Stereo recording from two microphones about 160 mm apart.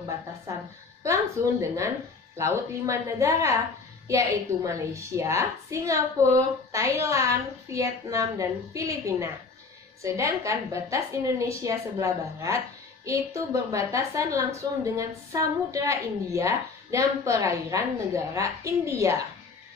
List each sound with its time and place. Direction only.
1.0 s a woman's voice: 20° right (ahead or behind)